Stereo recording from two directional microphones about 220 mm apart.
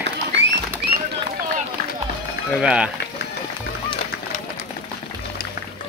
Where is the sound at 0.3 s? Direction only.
50° right (ahead or behind).